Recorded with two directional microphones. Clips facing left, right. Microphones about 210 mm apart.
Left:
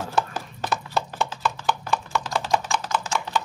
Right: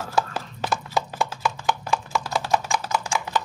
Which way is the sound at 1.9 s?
10° right (ahead or behind).